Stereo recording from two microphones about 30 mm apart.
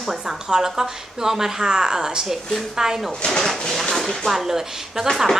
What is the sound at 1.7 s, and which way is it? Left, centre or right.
A woman's voice, right.